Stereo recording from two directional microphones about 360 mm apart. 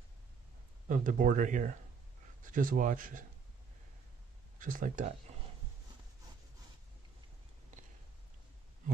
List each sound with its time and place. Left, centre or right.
0.8 s speech: right
4.6 s speech: right